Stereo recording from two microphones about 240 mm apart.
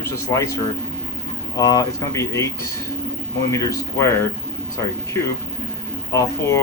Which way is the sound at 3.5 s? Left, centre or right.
Centre.